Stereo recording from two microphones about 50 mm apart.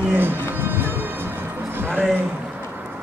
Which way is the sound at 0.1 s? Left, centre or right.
Right.